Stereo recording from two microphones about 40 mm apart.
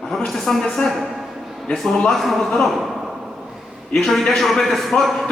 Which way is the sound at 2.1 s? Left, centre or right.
Centre.